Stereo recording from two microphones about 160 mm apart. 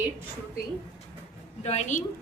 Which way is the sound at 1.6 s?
45° left (ahead or behind).